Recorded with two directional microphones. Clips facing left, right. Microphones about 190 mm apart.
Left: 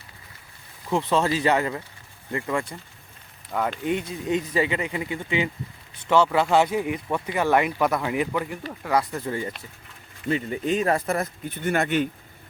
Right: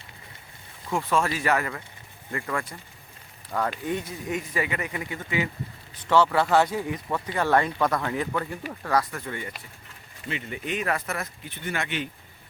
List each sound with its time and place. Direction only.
0.9 s speech: 20° left (ahead or behind)
3.5 s speech: 5° left (ahead or behind)
3.8 s speech: 20° left (ahead or behind)
6.1 s speech: 10° left (ahead or behind)
9.2 s speech: 35° left (ahead or behind)
11.4 s speech: 45° left (ahead or behind)